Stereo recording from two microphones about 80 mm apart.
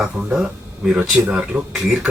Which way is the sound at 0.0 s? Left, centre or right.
Centre.